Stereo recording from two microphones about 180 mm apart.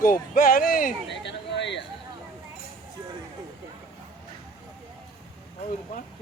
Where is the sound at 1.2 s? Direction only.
75° left (ahead or behind).